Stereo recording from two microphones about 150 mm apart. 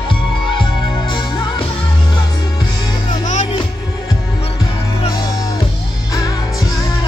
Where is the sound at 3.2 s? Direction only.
55° left (ahead or behind).